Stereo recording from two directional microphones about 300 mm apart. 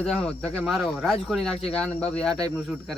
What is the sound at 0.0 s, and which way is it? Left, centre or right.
A man's voice, centre.